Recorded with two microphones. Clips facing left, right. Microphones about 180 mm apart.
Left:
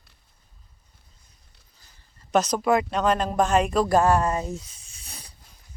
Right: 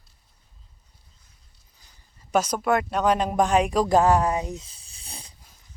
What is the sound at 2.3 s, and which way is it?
Speech, 10° right (ahead or behind).